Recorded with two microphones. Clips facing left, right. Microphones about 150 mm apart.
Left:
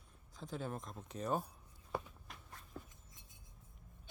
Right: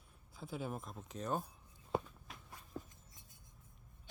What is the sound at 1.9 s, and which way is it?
Walk, 20° right (ahead or behind).